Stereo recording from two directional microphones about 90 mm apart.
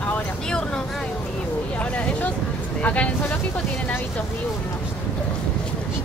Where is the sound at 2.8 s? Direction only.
15° left (ahead or behind).